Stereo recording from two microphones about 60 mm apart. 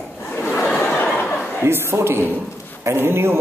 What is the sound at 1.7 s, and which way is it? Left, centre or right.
A man's voice, right.